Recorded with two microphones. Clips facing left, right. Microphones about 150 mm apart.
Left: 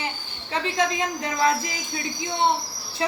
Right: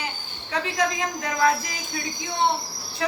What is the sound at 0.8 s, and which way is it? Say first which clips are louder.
Speech: left 1 dB; 25° left (ahead or behind).